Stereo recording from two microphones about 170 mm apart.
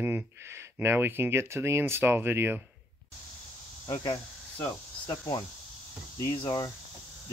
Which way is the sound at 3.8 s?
20° left (ahead or behind).